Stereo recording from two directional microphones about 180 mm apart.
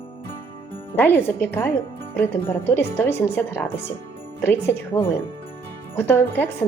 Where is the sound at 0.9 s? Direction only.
10° left (ahead or behind).